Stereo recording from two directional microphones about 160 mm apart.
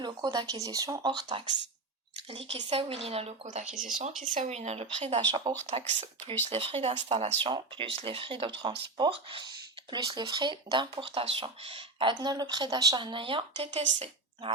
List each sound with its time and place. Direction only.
0.0 s speech: 25° right (ahead or behind)
2.6 s speech: 35° right (ahead or behind)
5.3 s speech: 25° right (ahead or behind)
5.6 s speech: 45° right (ahead or behind)
7.4 s speech: 30° right (ahead or behind)